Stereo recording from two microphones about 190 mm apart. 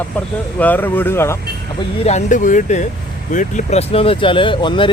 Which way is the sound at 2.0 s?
40° left (ahead or behind).